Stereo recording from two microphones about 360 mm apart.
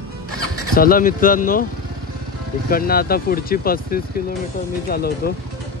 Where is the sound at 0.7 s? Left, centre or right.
Left.